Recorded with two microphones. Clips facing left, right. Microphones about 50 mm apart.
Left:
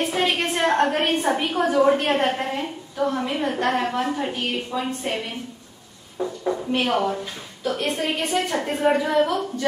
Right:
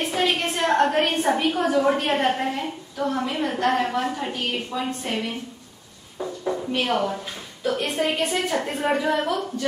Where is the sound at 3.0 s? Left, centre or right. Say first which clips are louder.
Left 1 dB; centre.